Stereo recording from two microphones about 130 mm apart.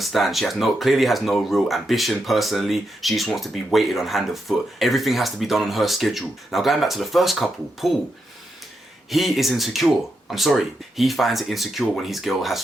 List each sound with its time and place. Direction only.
0.0 s speech: centre (ahead or behind)
9.0 s speech: centre (ahead or behind)